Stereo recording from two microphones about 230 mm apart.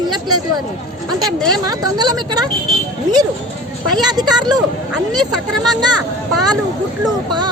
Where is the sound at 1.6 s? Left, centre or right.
Centre.